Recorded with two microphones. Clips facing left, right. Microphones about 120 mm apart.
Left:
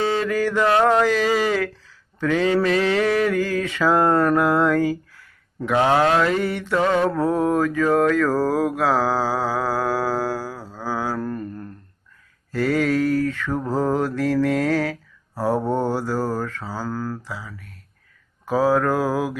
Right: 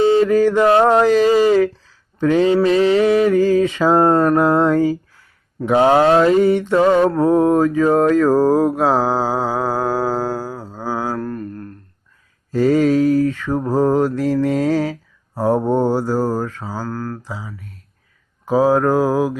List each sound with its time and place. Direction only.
0.2 s mantra: 20° right (ahead or behind)
11.2 s mantra: centre (ahead or behind)
12.5 s mantra: 20° right (ahead or behind)
16.8 s speech: 5° left (ahead or behind)
17.2 s mantra: 20° right (ahead or behind)